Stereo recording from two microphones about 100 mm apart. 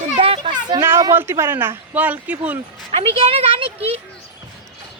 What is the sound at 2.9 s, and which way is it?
Speech, 70° right (ahead or behind).